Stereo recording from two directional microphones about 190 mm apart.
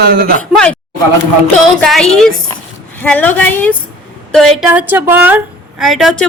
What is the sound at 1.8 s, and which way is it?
A woman's voice, 5° left (ahead or behind).